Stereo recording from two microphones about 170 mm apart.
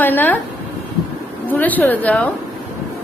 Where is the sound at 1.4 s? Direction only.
10° left (ahead or behind).